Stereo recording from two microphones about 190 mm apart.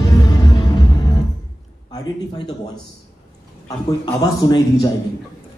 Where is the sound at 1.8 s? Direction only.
20° left (ahead or behind).